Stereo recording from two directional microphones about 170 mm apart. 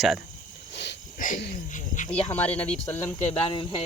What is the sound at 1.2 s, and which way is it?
Speech, 50° left (ahead or behind).